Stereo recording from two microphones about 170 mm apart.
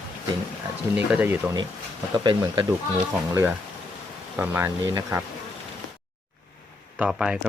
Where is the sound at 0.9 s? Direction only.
10° right (ahead or behind).